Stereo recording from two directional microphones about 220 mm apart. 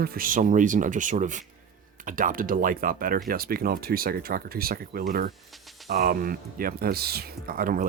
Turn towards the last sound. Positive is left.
turn(degrees=-40)  # may be behind; listen again after turning